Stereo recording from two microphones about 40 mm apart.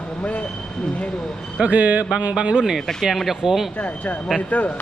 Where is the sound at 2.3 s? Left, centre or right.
Right.